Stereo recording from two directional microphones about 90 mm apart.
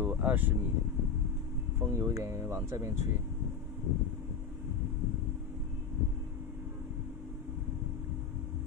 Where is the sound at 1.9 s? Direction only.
30° right (ahead or behind).